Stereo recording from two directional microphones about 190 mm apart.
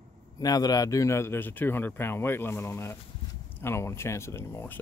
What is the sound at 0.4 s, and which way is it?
Speech, 20° left (ahead or behind).